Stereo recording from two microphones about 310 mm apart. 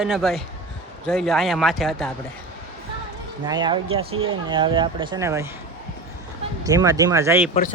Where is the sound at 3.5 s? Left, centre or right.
Centre.